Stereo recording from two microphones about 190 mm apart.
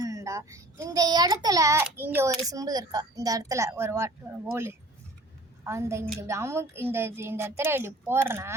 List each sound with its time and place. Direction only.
0.0 s a child's voice: 15° right (ahead or behind)
5.6 s a child's voice: 15° right (ahead or behind)